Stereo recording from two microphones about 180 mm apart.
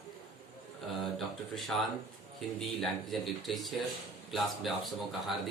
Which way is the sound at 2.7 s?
Centre (ahead or behind).